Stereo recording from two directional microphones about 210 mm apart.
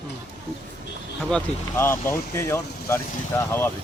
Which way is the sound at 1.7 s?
10° left (ahead or behind).